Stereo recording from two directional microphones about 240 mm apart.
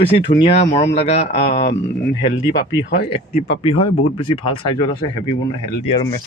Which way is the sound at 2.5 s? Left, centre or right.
Left.